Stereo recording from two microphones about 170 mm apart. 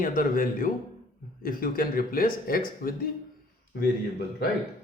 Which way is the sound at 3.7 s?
70° left (ahead or behind).